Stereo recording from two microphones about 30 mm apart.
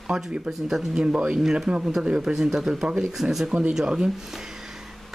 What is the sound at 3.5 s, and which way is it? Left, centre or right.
Speech, right.